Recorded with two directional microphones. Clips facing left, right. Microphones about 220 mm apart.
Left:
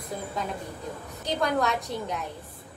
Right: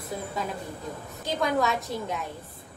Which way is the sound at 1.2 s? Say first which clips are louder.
Even; centre (ahead or behind).